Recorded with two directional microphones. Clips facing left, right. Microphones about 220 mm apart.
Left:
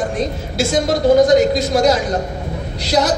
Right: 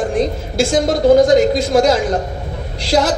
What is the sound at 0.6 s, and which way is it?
Speech, 50° right (ahead or behind).